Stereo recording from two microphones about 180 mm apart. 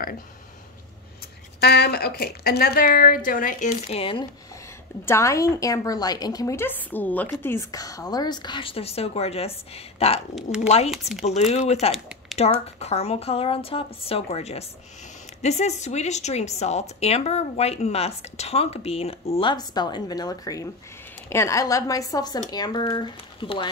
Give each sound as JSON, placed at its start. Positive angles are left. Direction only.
{"t": 1.6, "sound": "a woman's voice", "side_deg": 60}
{"t": 5.0, "sound": "a woman's voice", "side_deg": 15}
{"t": 10.3, "sound": "speech", "side_deg": -5}
{"t": 11.1, "sound": "a woman's voice", "side_deg": 40}